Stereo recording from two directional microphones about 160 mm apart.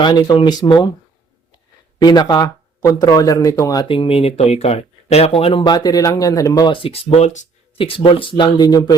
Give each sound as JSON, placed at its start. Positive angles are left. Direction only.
{"t": 0.0, "sound": "speech", "side_deg": 30}
{"t": 2.0, "sound": "speech", "side_deg": 25}